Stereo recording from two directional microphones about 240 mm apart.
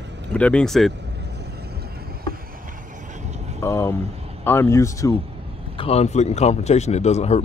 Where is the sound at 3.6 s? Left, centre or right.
Centre.